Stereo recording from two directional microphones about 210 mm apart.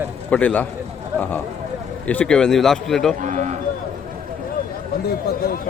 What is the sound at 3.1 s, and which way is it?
Speech, 35° right (ahead or behind).